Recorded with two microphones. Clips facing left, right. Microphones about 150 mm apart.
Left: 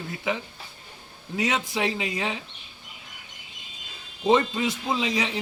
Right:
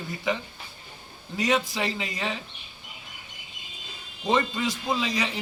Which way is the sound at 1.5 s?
15° left (ahead or behind).